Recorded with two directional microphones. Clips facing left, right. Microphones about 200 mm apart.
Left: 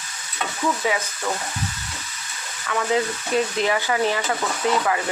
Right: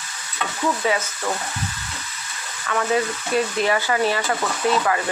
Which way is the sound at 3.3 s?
20° left (ahead or behind).